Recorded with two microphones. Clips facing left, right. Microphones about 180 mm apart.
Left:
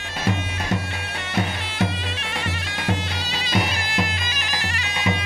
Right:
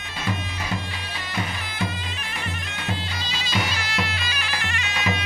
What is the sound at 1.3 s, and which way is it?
Bagpipes, 75° left (ahead or behind).